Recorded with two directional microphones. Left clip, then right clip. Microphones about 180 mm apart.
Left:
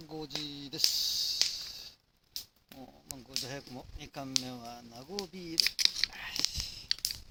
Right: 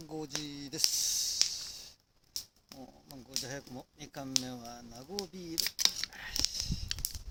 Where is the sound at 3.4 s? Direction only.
15° left (ahead or behind).